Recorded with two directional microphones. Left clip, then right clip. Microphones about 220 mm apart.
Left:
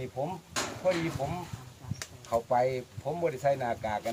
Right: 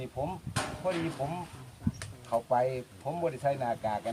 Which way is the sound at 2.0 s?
20° left (ahead or behind).